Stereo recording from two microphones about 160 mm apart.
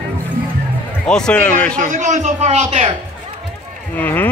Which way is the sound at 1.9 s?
50° right (ahead or behind).